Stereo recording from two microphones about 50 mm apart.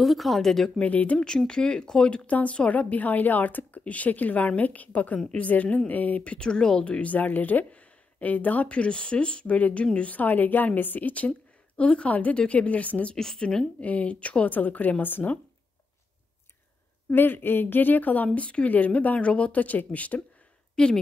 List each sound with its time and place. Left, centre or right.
0.0 s speech: centre
0.7 s speech: left
1.5 s speech: centre
13.1 s a woman's voice: centre
13.7 s speech: left
17.1 s speech: left
20.7 s speech: centre